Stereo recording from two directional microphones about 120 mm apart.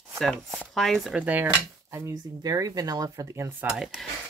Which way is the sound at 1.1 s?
15° right (ahead or behind).